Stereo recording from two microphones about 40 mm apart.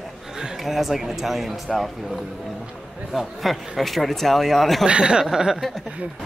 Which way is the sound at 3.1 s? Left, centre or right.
Centre.